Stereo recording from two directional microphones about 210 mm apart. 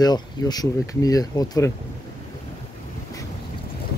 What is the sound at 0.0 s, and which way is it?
Speech, 20° left (ahead or behind).